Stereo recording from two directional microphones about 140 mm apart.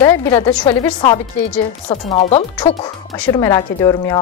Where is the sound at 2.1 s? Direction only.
50° left (ahead or behind).